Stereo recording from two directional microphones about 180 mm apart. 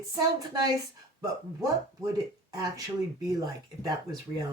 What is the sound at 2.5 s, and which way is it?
Speech, 20° right (ahead or behind).